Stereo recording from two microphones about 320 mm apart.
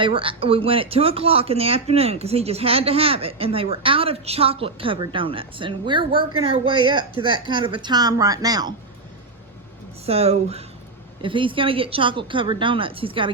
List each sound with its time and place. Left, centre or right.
0.0 s speech: centre
10.1 s speech: centre